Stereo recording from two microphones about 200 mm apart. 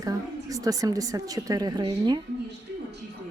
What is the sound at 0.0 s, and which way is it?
A woman's voice, 15° right (ahead or behind).